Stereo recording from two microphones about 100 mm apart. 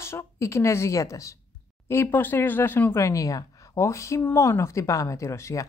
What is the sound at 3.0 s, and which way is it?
A woman's voice, 35° left (ahead or behind).